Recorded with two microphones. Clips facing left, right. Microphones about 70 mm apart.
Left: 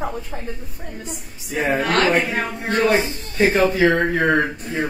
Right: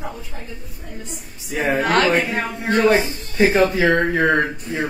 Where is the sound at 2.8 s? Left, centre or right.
Right.